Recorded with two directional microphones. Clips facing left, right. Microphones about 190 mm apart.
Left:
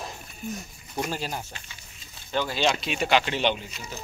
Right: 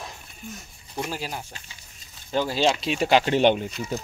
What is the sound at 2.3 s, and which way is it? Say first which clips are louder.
Speech: right 3 dB; 35° right (ahead or behind).